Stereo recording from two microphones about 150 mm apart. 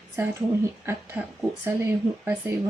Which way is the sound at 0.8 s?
15° right (ahead or behind).